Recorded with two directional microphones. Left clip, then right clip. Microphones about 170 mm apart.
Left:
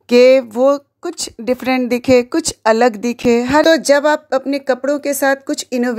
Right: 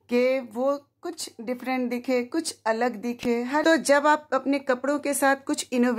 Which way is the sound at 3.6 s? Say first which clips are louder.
Left 7 dB; 30° left (ahead or behind).